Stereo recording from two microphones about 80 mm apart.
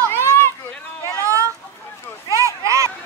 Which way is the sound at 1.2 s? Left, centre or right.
Right.